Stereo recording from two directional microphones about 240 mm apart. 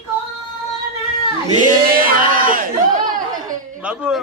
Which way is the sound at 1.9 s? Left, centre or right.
Right.